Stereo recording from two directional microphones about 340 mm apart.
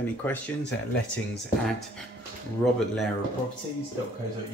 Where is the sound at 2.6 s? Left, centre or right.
Centre.